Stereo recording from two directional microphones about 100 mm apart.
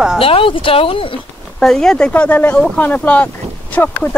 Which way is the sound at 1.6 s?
5° left (ahead or behind).